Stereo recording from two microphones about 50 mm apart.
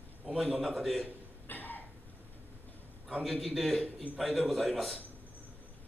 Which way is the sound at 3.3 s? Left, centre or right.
Centre.